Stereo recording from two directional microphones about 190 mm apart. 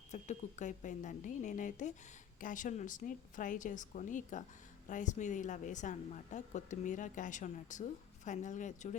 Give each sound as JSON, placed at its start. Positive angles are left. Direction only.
{"t": 0.1, "sound": "a woman's voice", "side_deg": 40}